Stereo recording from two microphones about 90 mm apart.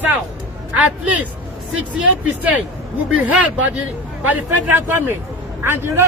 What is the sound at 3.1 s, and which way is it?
A man's voice, 15° right (ahead or behind).